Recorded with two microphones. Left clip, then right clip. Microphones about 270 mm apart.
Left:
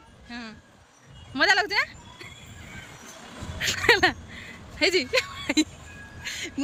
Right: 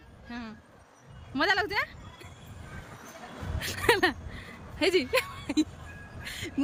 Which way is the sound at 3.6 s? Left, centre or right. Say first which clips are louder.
Left 5 dB; centre.